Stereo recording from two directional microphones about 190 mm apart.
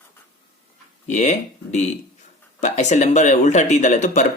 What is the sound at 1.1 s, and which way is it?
Speech, 40° left (ahead or behind).